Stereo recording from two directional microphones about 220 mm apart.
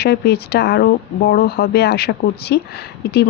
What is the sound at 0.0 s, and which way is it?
Speech, 45° left (ahead or behind).